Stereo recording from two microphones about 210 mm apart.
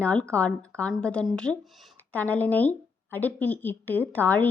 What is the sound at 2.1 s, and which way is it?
Speech, 10° left (ahead or behind).